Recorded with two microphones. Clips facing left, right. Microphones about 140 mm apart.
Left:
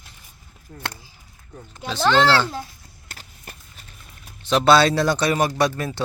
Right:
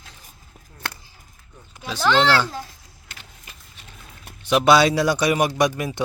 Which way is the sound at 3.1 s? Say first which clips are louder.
Left 3 dB; 40° left (ahead or behind).